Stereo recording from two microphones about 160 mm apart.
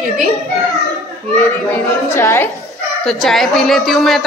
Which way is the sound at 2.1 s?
15° left (ahead or behind).